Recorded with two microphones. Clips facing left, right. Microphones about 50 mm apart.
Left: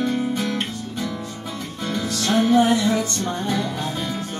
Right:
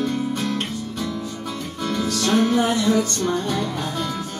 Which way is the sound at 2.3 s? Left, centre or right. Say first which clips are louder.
Left 3 dB; left.